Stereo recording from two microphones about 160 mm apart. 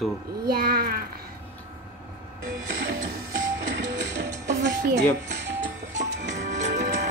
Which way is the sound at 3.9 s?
90° right.